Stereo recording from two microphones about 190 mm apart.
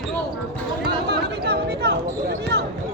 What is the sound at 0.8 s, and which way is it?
Speech, 60° right (ahead or behind).